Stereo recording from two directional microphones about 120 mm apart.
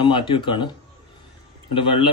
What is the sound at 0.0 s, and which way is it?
Speech, 40° left (ahead or behind).